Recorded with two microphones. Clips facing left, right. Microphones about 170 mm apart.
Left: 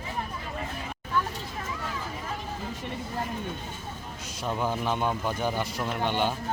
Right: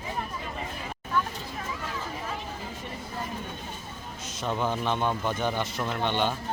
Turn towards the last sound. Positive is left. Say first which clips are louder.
# even
turn(degrees=10)  # may be behind; listen again after turning